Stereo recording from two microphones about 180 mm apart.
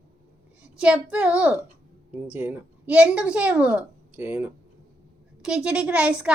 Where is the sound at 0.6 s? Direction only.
5° right (ahead or behind).